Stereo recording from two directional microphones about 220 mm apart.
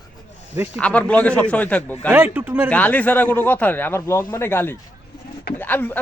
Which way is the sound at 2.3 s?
10° right (ahead or behind).